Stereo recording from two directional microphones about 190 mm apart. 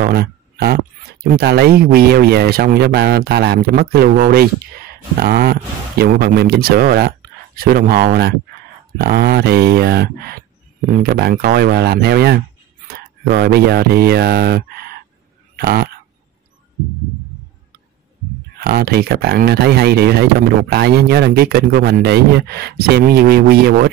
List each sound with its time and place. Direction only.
0.0 s a sound: 55° right (ahead or behind)
1.2 s speech: 55° right (ahead or behind)
18.6 s speech: 55° right (ahead or behind)